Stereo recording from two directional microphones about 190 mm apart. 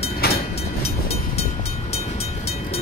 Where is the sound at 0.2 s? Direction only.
55° left (ahead or behind).